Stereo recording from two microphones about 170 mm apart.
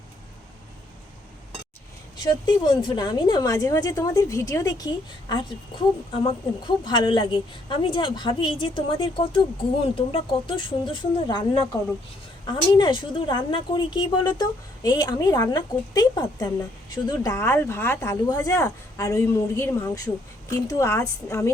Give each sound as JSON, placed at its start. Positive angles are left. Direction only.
{"t": 2.1, "sound": "a woman's voice", "side_deg": 25}